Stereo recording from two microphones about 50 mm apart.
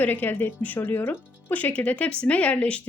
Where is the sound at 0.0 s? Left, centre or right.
Left.